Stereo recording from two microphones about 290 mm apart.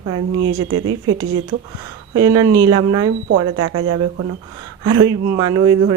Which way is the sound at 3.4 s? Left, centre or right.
Right.